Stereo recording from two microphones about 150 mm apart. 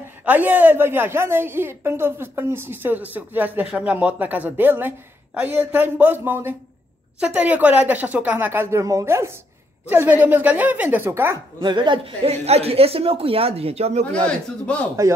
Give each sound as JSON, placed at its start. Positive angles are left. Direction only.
{"t": 0.2, "sound": "a woman's voice", "side_deg": -10}
{"t": 11.6, "sound": "a woman's voice", "side_deg": -30}
{"t": 14.1, "sound": "a man's voice", "side_deg": 5}